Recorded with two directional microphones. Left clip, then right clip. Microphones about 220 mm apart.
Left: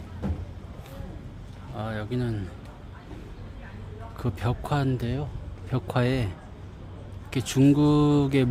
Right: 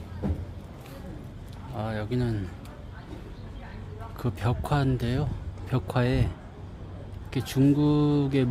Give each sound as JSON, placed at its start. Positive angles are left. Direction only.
{"t": 1.7, "sound": "speech", "side_deg": 0}
{"t": 4.2, "sound": "speech", "side_deg": 5}
{"t": 5.7, "sound": "speech", "side_deg": 5}